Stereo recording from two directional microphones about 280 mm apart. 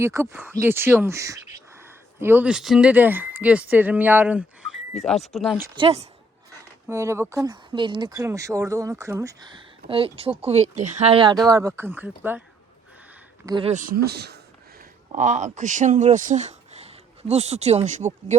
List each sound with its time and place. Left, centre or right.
0.0 s speech: centre
5.7 s speech: centre
13.4 s speech: centre